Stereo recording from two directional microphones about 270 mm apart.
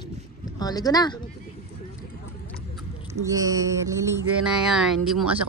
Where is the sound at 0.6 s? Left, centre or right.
Centre.